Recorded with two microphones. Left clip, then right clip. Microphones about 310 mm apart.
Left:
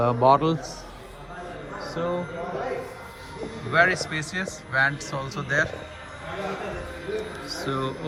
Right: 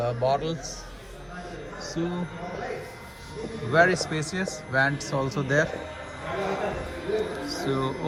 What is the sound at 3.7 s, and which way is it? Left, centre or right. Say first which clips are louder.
A man's voice: even; centre.